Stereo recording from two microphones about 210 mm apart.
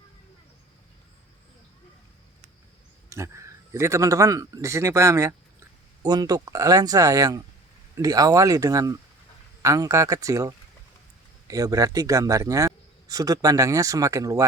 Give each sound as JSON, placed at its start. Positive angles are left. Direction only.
{"t": 3.1, "sound": "a man's voice", "side_deg": -15}